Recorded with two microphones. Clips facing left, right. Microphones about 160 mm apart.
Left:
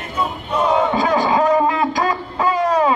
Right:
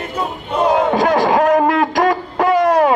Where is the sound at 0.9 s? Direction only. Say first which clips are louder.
Right 3 dB; 75° right (ahead or behind).